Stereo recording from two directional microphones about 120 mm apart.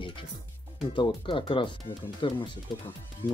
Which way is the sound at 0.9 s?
45° left (ahead or behind).